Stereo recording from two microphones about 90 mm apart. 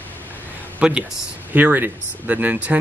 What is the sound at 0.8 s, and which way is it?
Speech, 10° right (ahead or behind).